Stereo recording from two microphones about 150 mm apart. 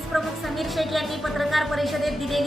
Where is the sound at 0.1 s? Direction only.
Centre (ahead or behind).